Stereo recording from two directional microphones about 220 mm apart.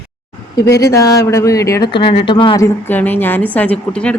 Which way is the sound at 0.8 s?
15° left (ahead or behind).